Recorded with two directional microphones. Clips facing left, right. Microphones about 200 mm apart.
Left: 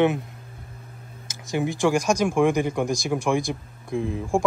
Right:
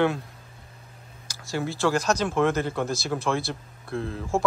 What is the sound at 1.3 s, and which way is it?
Speech, 20° left (ahead or behind).